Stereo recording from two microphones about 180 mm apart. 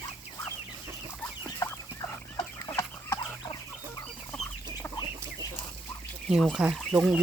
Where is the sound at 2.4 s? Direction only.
20° left (ahead or behind).